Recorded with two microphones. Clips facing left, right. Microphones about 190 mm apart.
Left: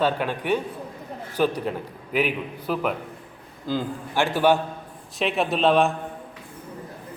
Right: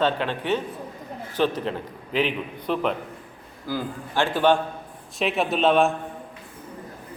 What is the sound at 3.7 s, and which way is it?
A man's voice, 15° left (ahead or behind).